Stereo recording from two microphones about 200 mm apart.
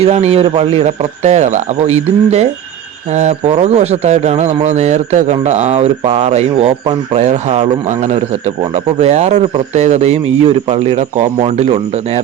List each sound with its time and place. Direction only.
0.0 s speech: 30° right (ahead or behind)